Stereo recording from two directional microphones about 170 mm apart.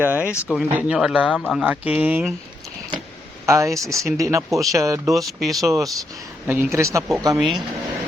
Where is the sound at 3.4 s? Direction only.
20° right (ahead or behind).